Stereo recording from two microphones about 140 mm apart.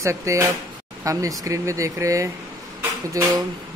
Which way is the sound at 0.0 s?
20° right (ahead or behind).